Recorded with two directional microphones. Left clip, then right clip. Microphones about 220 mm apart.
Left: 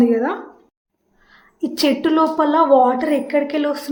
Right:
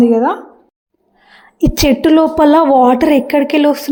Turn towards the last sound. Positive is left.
turn(degrees=-30)  # may be behind; listen again after turning